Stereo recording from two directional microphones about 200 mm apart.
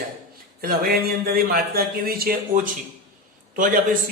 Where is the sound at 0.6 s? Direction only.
45° right (ahead or behind).